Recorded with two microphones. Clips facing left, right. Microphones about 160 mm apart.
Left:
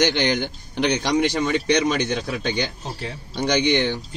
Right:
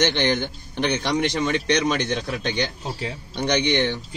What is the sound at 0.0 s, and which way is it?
Speech, 15° left (ahead or behind).